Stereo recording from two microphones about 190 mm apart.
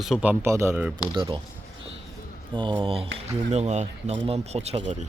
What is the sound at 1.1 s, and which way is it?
Speech, 25° right (ahead or behind).